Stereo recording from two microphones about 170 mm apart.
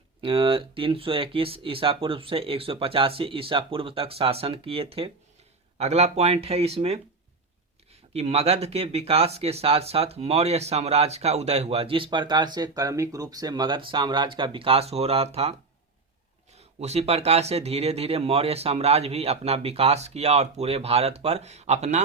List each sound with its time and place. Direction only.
0.2 s speech: 30° right (ahead or behind)
8.1 s speech: 35° right (ahead or behind)
16.6 s speech: 40° right (ahead or behind)